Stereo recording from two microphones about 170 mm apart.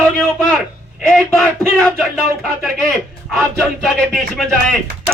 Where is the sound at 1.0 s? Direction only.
5° left (ahead or behind).